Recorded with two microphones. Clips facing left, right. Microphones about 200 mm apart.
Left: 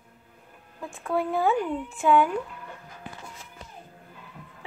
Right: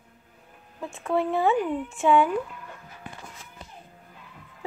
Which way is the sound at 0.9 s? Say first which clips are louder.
Right 2 dB; centre (ahead or behind).